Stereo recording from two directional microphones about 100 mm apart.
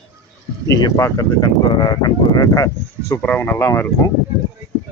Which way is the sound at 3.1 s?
15° left (ahead or behind).